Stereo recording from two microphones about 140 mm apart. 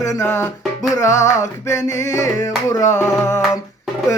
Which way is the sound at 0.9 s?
20° left (ahead or behind).